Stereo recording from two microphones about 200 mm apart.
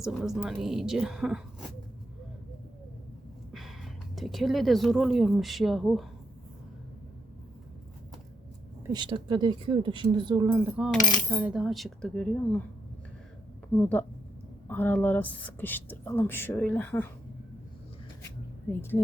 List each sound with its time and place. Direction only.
0.0 s speech: centre (ahead or behind)
4.1 s speech: centre (ahead or behind)
8.9 s speech: 25° right (ahead or behind); by 12.6 s 5° left (ahead or behind)
13.7 s speech: 10° left (ahead or behind)
18.7 s speech: 10° left (ahead or behind)